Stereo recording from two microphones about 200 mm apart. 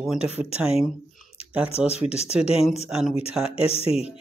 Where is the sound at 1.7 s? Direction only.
30° left (ahead or behind).